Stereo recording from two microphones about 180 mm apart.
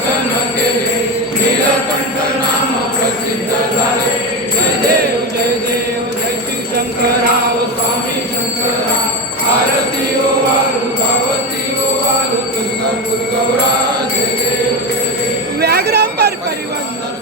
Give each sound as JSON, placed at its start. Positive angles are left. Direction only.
{"t": 15.6, "sound": "jingle bell", "side_deg": -65}